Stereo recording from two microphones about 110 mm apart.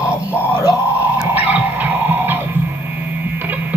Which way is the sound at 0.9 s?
15° right (ahead or behind).